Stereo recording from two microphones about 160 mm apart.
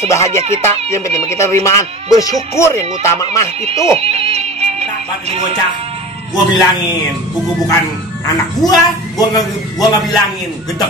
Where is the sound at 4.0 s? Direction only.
40° right (ahead or behind).